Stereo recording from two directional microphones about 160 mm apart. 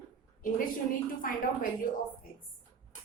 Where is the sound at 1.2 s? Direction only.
60° left (ahead or behind).